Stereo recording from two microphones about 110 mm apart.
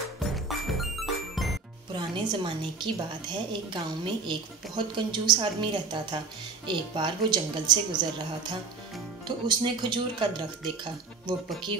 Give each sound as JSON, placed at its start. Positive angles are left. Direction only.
{"t": 0.2, "sound": "music", "side_deg": 0}
{"t": 1.9, "sound": "a woman's voice", "side_deg": -45}
{"t": 11.7, "sound": "a woman's voice", "side_deg": -50}